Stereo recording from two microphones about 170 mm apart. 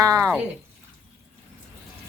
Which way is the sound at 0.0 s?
20° right (ahead or behind).